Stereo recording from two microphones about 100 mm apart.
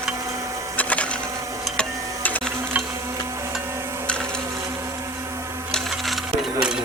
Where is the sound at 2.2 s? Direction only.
15° left (ahead or behind).